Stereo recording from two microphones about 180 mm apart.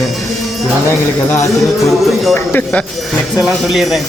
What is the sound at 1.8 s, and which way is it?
Speech, centre (ahead or behind).